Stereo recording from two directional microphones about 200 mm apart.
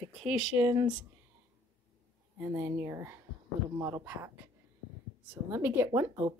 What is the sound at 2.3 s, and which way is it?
Speech, 10° right (ahead or behind).